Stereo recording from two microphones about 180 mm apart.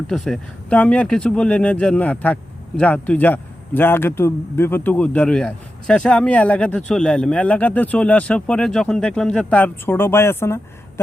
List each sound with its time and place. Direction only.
0.1 s speech: 5° left (ahead or behind)